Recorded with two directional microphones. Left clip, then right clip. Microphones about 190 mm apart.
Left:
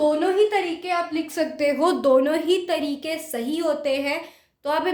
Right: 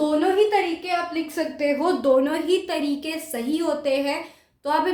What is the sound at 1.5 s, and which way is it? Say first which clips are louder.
Speech: left 1 dB; 60° left (ahead or behind).